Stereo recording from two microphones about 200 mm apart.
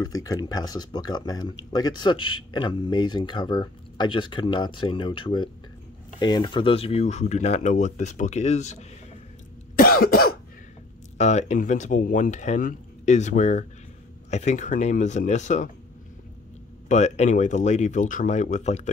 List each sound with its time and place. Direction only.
0.0 s speech: 20° left (ahead or behind); by 8.8 s 35° left (ahead or behind)
9.8 s cough: 50° left (ahead or behind)
11.1 s speech: 35° left (ahead or behind)
16.9 s speech: 35° left (ahead or behind)